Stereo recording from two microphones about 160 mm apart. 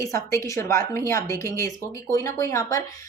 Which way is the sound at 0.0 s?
20° left (ahead or behind).